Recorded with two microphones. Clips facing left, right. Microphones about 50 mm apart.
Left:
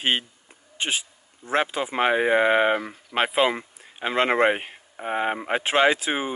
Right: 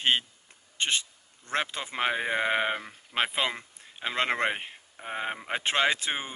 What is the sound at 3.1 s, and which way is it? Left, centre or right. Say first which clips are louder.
Speech: left 7 dB; centre.